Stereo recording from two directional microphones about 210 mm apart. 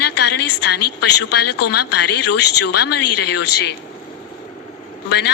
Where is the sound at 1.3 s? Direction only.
50° left (ahead or behind).